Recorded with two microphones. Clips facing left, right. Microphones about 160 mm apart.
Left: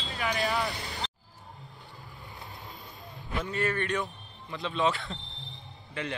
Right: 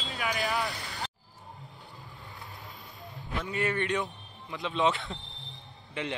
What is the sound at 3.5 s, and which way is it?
Speech, 20° right (ahead or behind).